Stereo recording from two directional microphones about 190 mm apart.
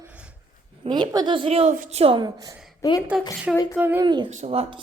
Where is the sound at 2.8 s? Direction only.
15° left (ahead or behind).